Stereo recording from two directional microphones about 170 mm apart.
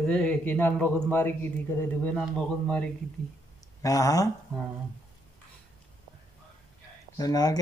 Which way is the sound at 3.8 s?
20° left (ahead or behind).